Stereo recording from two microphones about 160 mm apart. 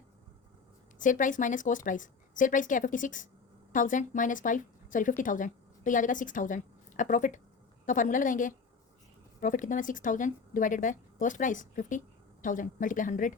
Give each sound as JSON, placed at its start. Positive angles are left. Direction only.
{"t": 0.9, "sound": "a woman's voice", "side_deg": 55}